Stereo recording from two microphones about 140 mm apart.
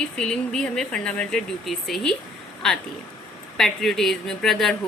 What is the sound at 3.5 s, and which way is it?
A woman's voice, centre (ahead or behind).